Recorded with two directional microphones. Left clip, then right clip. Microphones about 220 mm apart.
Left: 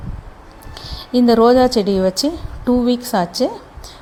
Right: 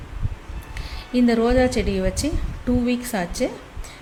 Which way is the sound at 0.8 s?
25° left (ahead or behind).